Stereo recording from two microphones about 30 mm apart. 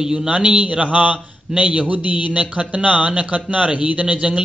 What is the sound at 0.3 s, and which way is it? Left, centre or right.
Speech, right.